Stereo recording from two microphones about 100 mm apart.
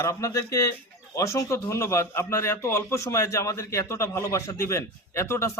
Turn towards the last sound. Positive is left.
turn(degrees=30)  # may be behind; listen again after turning